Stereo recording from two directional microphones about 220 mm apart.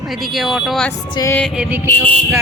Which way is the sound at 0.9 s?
20° left (ahead or behind).